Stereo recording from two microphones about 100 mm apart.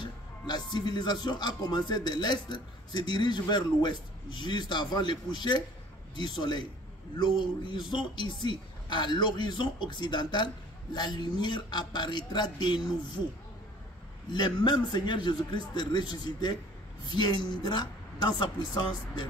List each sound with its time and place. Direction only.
0.0 s speech: 45° left (ahead or behind)
14.3 s speech: 45° left (ahead or behind)